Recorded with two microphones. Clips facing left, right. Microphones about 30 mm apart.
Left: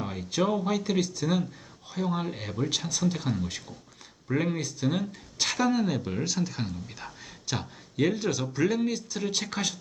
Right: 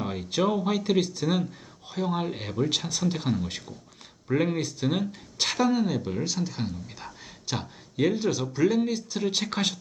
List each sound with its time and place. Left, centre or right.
0.0 s speech: centre
9.5 s speech: right